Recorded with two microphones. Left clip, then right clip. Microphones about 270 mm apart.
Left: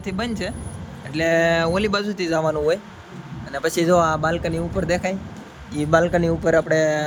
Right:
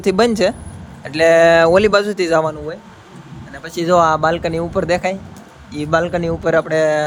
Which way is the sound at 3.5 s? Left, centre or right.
Left.